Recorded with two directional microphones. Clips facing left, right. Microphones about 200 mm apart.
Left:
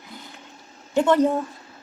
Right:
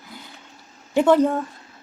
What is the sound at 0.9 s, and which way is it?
Speech, 10° right (ahead or behind).